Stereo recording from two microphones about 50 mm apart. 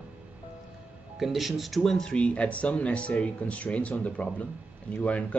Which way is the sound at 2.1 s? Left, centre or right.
Left.